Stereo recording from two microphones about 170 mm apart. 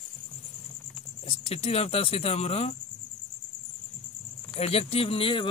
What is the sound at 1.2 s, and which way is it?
Speech, 35° left (ahead or behind).